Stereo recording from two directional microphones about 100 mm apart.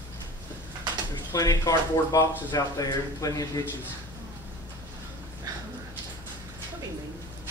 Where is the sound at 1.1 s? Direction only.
35° left (ahead or behind).